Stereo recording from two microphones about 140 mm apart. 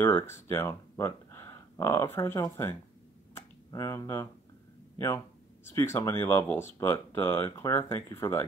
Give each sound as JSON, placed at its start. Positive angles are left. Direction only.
{"t": 0.0, "sound": "speech", "side_deg": 15}
{"t": 3.3, "sound": "a sound", "side_deg": 20}
{"t": 4.9, "sound": "speech", "side_deg": 20}